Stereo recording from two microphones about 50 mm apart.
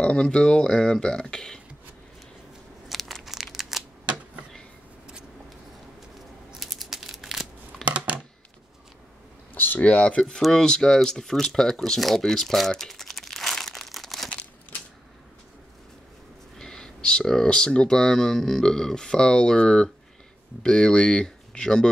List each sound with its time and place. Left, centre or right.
0.0 s speech: centre
2.9 s crumpling: centre
6.6 s a sound: centre
7.8 s a sound: centre
9.8 s speech: left; by 14.3 s centre
16.5 s speech: centre